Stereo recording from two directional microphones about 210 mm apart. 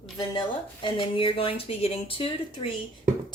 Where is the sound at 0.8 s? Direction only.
25° left (ahead or behind).